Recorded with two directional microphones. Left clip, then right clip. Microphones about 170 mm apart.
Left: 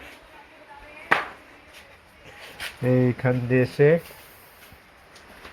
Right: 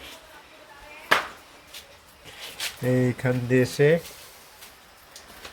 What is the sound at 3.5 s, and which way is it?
Speech, 20° right (ahead or behind).